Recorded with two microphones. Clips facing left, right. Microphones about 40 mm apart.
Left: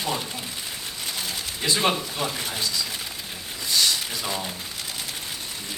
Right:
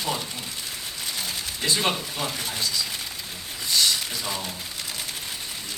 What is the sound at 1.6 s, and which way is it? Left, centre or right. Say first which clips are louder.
Speech: left 2 dB; centre.